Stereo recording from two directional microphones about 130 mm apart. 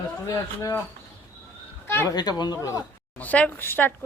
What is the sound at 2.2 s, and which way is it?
Speech, 30° left (ahead or behind).